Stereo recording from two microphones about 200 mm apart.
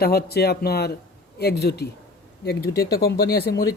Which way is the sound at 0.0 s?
50° left (ahead or behind).